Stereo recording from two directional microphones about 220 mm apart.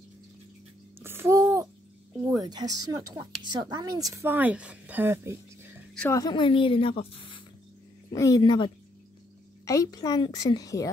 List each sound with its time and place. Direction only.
0.9 s a sound: 10° right (ahead or behind)
2.2 s a woman's voice: 15° right (ahead or behind)
5.9 s a woman's voice: 15° left (ahead or behind)